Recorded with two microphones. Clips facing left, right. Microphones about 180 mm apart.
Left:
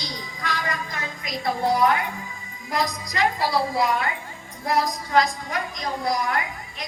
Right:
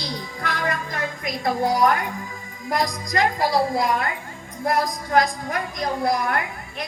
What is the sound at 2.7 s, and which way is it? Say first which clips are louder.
A woman's voice: right 2 dB; 45° right (ahead or behind).